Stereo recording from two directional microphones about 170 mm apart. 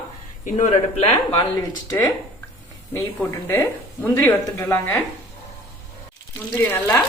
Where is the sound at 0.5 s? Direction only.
40° left (ahead or behind).